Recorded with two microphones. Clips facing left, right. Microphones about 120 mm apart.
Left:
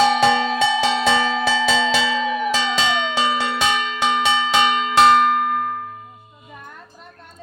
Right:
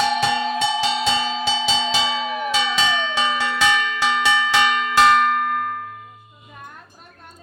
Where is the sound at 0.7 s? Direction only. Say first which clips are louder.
Left 3 dB; 60° left (ahead or behind); by 6.1 s 25° left (ahead or behind).